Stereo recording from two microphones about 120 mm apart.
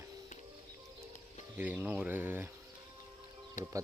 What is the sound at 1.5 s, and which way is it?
Speech, 15° right (ahead or behind).